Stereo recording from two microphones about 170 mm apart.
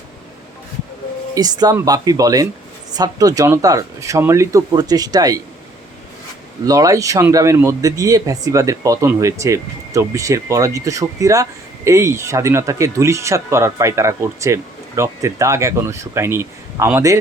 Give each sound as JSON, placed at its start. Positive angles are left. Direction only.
{"t": 1.4, "sound": "speech", "side_deg": -25}
{"t": 6.7, "sound": "speech", "side_deg": -20}